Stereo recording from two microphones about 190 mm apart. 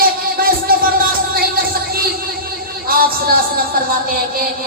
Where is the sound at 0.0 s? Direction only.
50° right (ahead or behind).